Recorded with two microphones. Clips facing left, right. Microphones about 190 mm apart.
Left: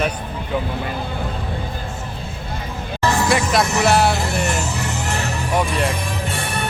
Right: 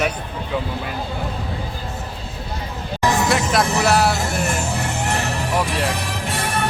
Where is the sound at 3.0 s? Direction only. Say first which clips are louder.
Even; 15° right (ahead or behind).